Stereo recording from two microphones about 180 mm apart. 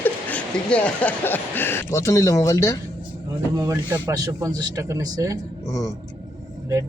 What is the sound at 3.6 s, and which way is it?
A man's voice, 20° right (ahead or behind).